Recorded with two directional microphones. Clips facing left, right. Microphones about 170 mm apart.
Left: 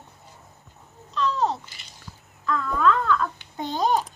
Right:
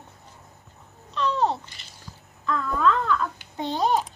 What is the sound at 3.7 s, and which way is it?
Babbling, centre (ahead or behind).